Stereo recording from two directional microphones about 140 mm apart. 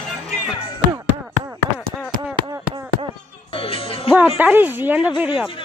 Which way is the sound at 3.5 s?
40° left (ahead or behind).